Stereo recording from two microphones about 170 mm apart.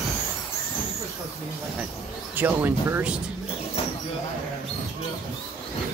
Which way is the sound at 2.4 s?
10° right (ahead or behind).